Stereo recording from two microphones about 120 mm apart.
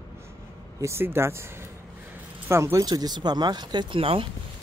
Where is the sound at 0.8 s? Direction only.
20° right (ahead or behind).